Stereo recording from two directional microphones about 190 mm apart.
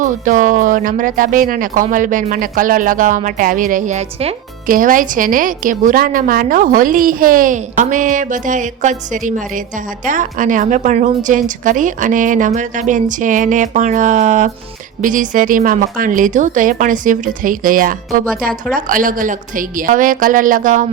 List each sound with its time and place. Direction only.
0.0 s a woman's voice: 45° right (ahead or behind)
4.6 s a woman's voice: 45° right (ahead or behind)